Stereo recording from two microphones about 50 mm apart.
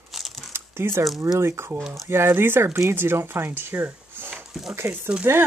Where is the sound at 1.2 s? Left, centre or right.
Right.